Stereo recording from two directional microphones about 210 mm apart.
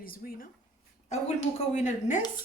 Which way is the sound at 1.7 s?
35° left (ahead or behind).